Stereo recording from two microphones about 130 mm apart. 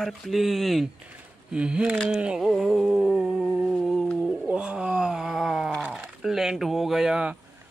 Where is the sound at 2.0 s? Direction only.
5° right (ahead or behind).